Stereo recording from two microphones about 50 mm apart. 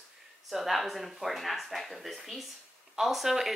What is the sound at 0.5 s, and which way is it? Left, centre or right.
A woman's voice, centre.